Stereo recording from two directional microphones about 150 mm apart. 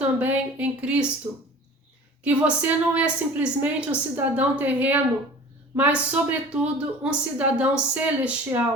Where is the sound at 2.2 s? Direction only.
10° right (ahead or behind).